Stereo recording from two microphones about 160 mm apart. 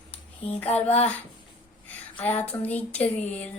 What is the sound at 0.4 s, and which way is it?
Child singing, 40° left (ahead or behind).